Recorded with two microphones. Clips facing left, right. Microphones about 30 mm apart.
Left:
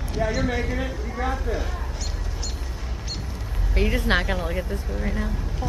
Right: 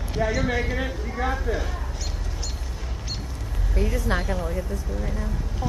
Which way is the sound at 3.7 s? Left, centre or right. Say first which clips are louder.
Left 3 dB; left.